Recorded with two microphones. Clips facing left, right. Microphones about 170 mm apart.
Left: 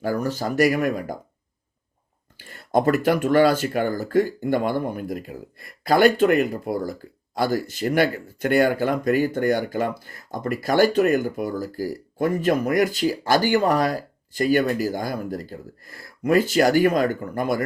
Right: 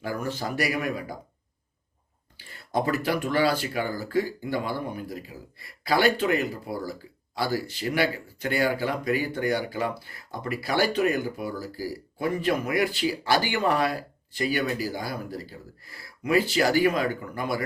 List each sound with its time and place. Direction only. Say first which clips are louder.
0.0 s speech: left 6 dB; 40° left (ahead or behind)
2.4 s speech: left 7 dB; 50° left (ahead or behind)